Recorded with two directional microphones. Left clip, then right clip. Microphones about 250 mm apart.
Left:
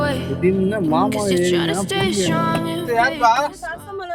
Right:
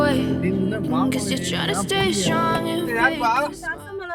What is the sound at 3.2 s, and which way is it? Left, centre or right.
Speech, right.